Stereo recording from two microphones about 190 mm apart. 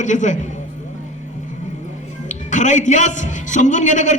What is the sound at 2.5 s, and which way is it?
A man's voice, 40° left (ahead or behind).